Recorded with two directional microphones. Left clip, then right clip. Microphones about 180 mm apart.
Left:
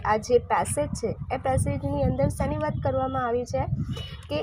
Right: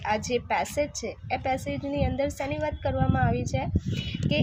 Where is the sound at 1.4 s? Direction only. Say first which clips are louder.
Left 3 dB; 20° right (ahead or behind).